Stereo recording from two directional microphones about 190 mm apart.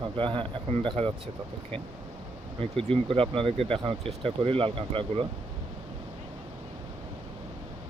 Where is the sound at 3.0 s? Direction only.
30° right (ahead or behind).